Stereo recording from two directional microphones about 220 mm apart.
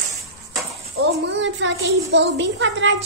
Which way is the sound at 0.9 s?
55° right (ahead or behind).